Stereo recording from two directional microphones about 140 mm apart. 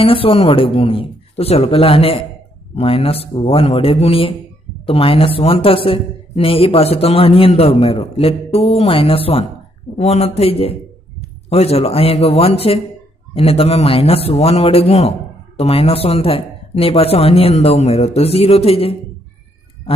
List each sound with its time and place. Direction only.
0.0 s a woman's voice: 40° left (ahead or behind)